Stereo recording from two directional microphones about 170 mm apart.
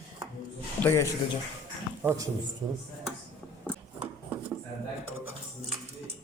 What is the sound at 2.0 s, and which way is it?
Speech, 15° right (ahead or behind).